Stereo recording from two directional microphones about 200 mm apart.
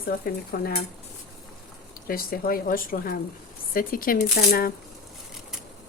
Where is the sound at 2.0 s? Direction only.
50° left (ahead or behind).